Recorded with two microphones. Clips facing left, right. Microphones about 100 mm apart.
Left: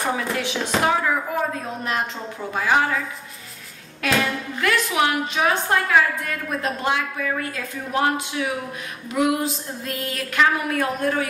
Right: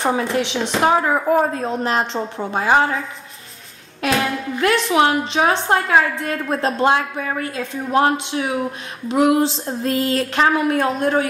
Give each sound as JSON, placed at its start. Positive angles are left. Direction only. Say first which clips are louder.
{"t": 0.0, "sound": "a woman's voice", "louder": "right 5 dB", "side_deg": -25}
{"t": 1.3, "sound": "speech", "louder": "right 8 dB", "side_deg": -45}
{"t": 1.9, "sound": "a woman's voice", "louder": "right 6 dB", "side_deg": -30}
{"t": 4.6, "sound": "a woman's voice", "louder": "right 5 dB", "side_deg": -30}